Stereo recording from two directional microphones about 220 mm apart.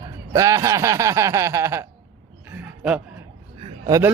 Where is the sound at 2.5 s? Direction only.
5° right (ahead or behind).